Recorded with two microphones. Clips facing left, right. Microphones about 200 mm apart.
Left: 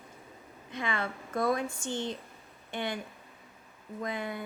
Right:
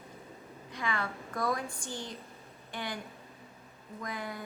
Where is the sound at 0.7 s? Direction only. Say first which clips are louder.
Left 2 dB; 25° left (ahead or behind).